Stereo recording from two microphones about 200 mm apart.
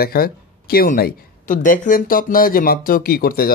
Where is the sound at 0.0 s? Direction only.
50° left (ahead or behind).